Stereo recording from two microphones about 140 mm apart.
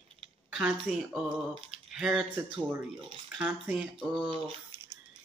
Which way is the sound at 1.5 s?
40° right (ahead or behind).